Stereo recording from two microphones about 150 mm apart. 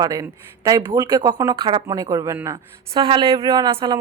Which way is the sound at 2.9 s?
35° right (ahead or behind).